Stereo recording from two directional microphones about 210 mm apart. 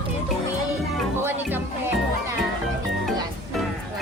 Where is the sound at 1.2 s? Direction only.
10° right (ahead or behind).